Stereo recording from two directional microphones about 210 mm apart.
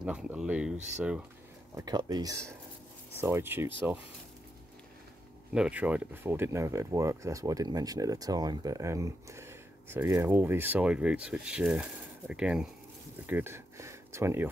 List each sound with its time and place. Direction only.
0.0 s speech: 5° right (ahead or behind)
1.8 s speech: 20° right (ahead or behind)
5.5 s speech: 5° right (ahead or behind)
13.3 s a sound: 10° right (ahead or behind)